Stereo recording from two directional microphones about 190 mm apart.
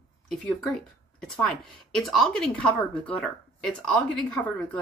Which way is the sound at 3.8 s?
5° left (ahead or behind).